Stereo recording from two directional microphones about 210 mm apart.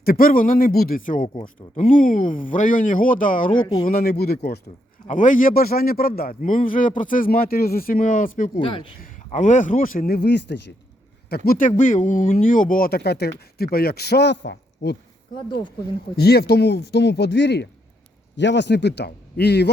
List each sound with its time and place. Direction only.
0.0 s speech: 45° left (ahead or behind)
3.5 s speech: 20° left (ahead or behind)
3.8 s speech: 45° left (ahead or behind)
5.0 s speech: 40° left (ahead or behind)
8.5 s speech: 25° left (ahead or behind)
9.0 s speech: 35° left (ahead or behind); by 14.9 s 50° left (ahead or behind)
16.1 s speech: 50° left (ahead or behind)